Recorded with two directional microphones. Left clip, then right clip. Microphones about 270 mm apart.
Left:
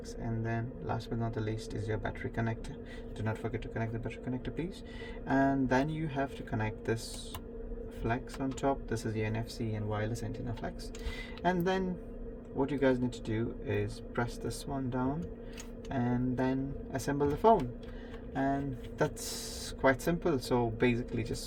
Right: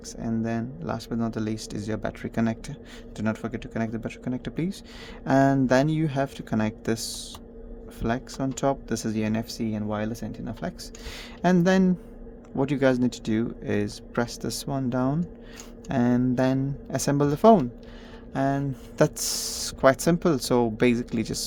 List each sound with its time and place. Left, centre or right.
0.2 s speech: right
8.0 s speech: right
11.4 s speech: right